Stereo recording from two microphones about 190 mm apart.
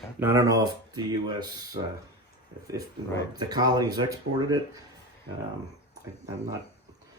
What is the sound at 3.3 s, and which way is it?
Speech, 20° right (ahead or behind).